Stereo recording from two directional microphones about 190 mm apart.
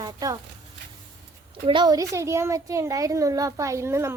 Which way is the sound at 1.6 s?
25° right (ahead or behind).